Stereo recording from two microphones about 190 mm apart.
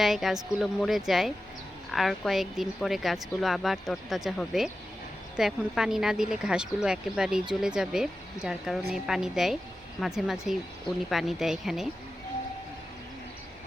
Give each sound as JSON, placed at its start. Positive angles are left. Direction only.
{"t": 0.0, "sound": "a woman's voice", "side_deg": 0}